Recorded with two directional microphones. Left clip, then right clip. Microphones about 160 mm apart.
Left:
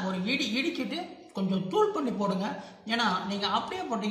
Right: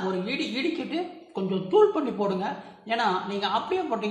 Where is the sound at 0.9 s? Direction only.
35° right (ahead or behind).